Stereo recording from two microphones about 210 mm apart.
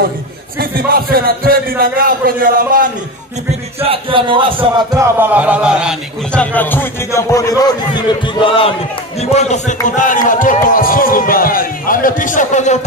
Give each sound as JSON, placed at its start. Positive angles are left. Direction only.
{"t": 0.6, "sound": "a man's voice", "side_deg": -45}
{"t": 3.8, "sound": "speech", "side_deg": -25}
{"t": 4.7, "sound": "a man's voice", "side_deg": -10}